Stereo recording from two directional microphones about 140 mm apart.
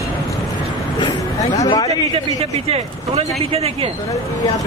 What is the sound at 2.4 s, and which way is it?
Speech, 45° right (ahead or behind).